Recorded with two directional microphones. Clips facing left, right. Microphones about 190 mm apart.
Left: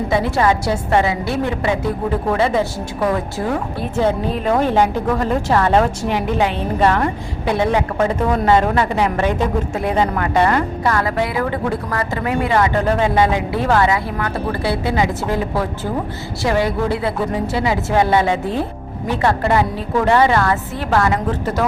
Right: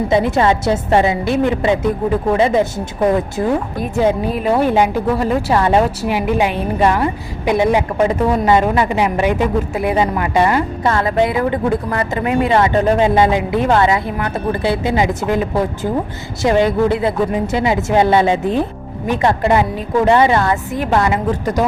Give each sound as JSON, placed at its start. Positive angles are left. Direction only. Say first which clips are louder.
{"t": 0.1, "sound": "a woman's voice", "louder": "right 2 dB", "side_deg": -20}
{"t": 10.8, "sound": "a woman's voice", "louder": "right 6 dB", "side_deg": -25}